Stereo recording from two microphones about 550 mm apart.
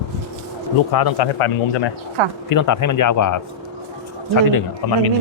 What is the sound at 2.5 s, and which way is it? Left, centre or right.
Speech, left.